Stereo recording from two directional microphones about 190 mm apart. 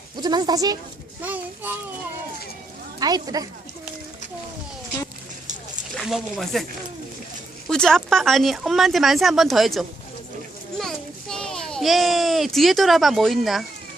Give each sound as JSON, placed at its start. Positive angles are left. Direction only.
{"t": 0.2, "sound": "speech", "side_deg": -20}
{"t": 1.2, "sound": "a child's voice", "side_deg": -10}
{"t": 3.0, "sound": "speech", "side_deg": -20}
{"t": 6.0, "sound": "speech", "side_deg": 0}
{"t": 7.7, "sound": "a child's voice", "side_deg": 5}